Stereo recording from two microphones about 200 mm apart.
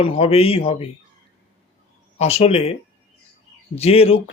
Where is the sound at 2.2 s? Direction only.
30° left (ahead or behind).